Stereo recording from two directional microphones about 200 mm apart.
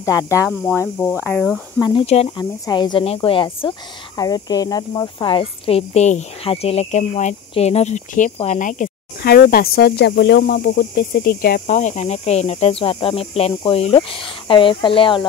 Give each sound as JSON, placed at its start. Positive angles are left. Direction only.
{"t": 0.0, "sound": "speech", "side_deg": 15}
{"t": 1.2, "sound": "speech", "side_deg": 5}
{"t": 1.8, "sound": "speech", "side_deg": 20}
{"t": 11.7, "sound": "speech", "side_deg": 35}